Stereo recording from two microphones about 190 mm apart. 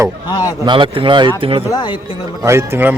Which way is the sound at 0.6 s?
25° right (ahead or behind).